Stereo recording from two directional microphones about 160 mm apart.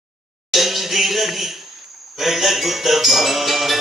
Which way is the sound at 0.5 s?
Centre (ahead or behind).